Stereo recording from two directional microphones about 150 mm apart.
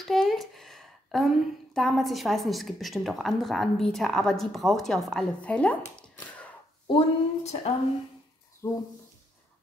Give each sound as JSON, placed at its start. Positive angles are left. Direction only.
{"t": 0.0, "sound": "a woman's voice", "side_deg": 0}
{"t": 6.9, "sound": "speech", "side_deg": 45}
{"t": 8.6, "sound": "speech", "side_deg": 20}